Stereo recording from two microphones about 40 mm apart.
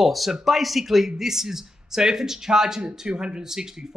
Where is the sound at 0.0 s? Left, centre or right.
Centre.